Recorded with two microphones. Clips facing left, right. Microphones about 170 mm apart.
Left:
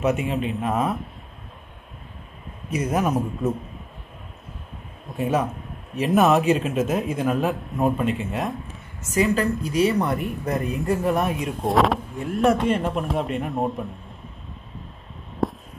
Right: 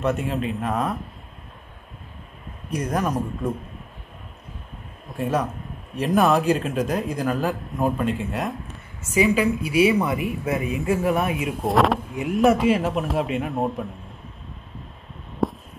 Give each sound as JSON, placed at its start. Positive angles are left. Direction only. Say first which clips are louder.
{"t": 0.0, "sound": "speech", "louder": "left 1 dB", "side_deg": 0}
{"t": 2.7, "sound": "speech", "louder": "left 2 dB", "side_deg": 5}
{"t": 5.1, "sound": "speech", "louder": "left 1 dB", "side_deg": 0}
{"t": 15.4, "sound": "a sound", "louder": "right 1 dB", "side_deg": 0}